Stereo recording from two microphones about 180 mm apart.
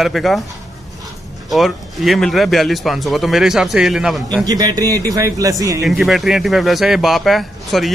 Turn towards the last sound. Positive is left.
turn(degrees=0)  # may be behind; listen again after turning